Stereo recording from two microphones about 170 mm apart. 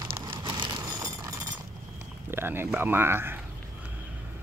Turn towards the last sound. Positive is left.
turn(degrees=-15)  # may be behind; listen again after turning